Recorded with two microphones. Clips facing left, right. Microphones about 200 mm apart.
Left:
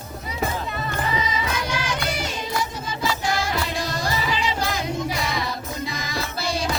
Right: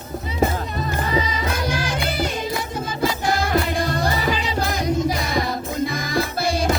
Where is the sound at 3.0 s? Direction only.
55° right (ahead or behind).